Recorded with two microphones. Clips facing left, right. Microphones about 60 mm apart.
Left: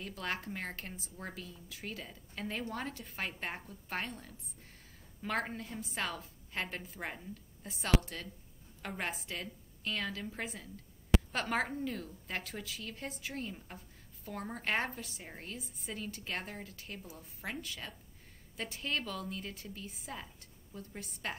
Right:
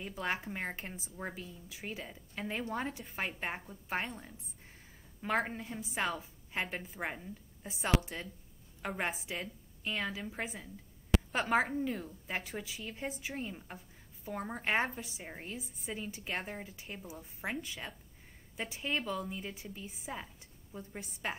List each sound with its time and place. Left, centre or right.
0.0 s a woman's voice: centre